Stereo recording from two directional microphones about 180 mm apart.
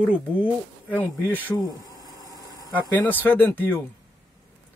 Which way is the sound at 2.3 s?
20° left (ahead or behind).